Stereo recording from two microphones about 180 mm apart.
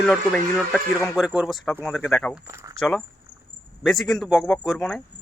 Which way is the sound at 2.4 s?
15° right (ahead or behind).